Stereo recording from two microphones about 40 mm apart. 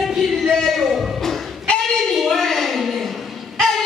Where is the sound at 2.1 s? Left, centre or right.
Centre.